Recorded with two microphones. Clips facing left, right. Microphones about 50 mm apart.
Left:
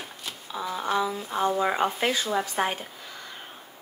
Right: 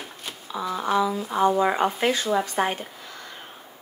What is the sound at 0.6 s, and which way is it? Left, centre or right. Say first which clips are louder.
Speech: right 3 dB; right.